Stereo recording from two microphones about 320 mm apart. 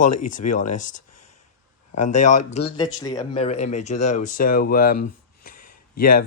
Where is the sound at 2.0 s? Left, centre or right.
Left.